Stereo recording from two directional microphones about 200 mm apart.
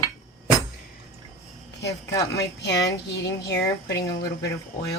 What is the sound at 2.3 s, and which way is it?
Speech, 60° left (ahead or behind).